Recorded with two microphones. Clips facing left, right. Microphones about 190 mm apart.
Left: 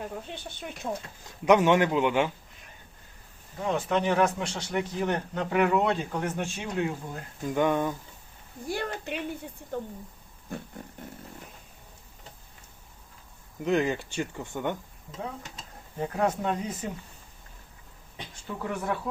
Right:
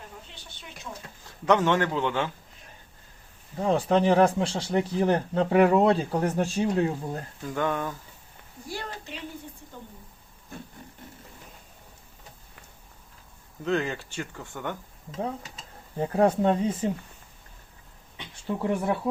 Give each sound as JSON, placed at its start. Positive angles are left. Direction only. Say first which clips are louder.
{"t": 0.1, "sound": "speech", "louder": "left 9 dB", "side_deg": 55}
{"t": 1.5, "sound": "speech", "louder": "left 2 dB", "side_deg": 15}
{"t": 3.6, "sound": "speech", "louder": "right 4 dB", "side_deg": -35}
{"t": 7.4, "sound": "speech", "louder": "left 4 dB", "side_deg": 15}
{"t": 8.6, "sound": "speech", "louder": "left 5 dB", "side_deg": 55}
{"t": 13.7, "sound": "speech", "louder": "left 2 dB", "side_deg": 15}
{"t": 16.0, "sound": "speech", "louder": "right 5 dB", "side_deg": -30}
{"t": 18.4, "sound": "speech", "louder": "right 5 dB", "side_deg": -30}